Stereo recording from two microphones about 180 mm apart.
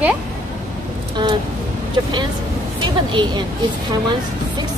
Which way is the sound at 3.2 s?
25° right (ahead or behind).